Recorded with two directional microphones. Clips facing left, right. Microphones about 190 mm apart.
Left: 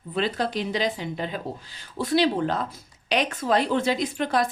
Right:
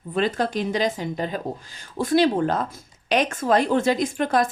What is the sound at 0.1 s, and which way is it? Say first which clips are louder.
Speech: right 3 dB; 45° right (ahead or behind).